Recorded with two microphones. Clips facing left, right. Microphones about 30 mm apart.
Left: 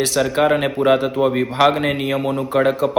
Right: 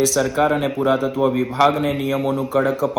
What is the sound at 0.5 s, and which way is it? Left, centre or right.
Speech, left.